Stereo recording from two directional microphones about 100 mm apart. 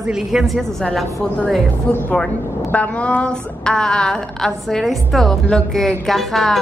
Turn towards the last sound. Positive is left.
turn(degrees=0)  # may be behind; listen again after turning